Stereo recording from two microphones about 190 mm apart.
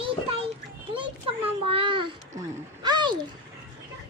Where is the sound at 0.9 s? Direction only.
25° right (ahead or behind).